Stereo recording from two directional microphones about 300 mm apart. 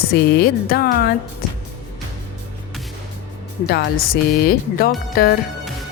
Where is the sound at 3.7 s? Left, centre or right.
Left.